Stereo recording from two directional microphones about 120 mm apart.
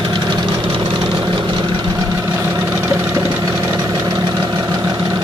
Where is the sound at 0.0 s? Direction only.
35° right (ahead or behind).